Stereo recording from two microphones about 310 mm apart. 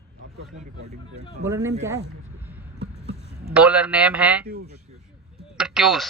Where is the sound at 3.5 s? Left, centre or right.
Centre.